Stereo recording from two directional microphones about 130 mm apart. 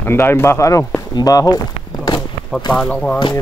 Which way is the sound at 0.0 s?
15° left (ahead or behind).